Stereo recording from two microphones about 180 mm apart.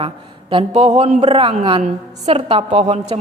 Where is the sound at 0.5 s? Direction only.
35° right (ahead or behind).